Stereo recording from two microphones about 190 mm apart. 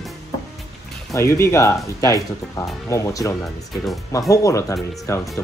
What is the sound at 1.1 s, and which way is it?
Speech, 15° left (ahead or behind).